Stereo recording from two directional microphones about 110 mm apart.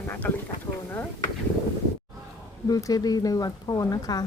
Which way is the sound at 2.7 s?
35° left (ahead or behind).